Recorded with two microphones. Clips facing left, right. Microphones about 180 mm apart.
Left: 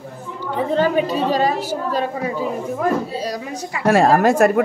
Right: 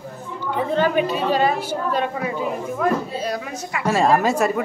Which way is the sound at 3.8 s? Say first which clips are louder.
Left 4 dB; 60° left (ahead or behind).